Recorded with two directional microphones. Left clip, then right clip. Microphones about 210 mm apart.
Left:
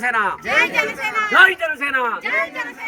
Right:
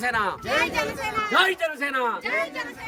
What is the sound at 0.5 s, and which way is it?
A man's voice, centre (ahead or behind).